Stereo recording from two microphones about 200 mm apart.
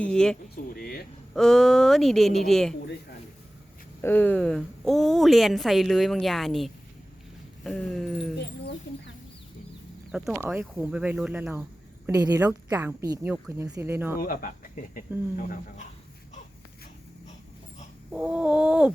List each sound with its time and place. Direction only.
0.0 s a woman's voice: 5° left (ahead or behind)
0.5 s a sound: 50° left (ahead or behind)
1.3 s a woman's voice: centre (ahead or behind)
4.0 s a woman's voice: 10° left (ahead or behind)
10.1 s a woman's voice: centre (ahead or behind)
12.0 s a woman's voice: 15° right (ahead or behind)
14.2 s speech: 45° left (ahead or behind)
18.1 s a woman's voice: 5° right (ahead or behind)